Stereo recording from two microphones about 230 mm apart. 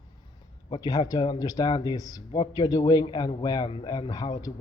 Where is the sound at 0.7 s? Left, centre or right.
Centre.